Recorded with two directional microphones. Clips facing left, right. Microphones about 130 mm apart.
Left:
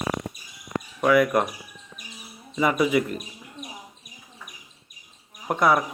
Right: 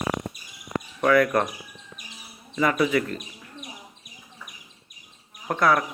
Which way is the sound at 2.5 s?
15° left (ahead or behind).